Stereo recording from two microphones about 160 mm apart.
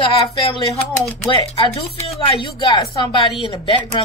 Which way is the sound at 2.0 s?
35° left (ahead or behind).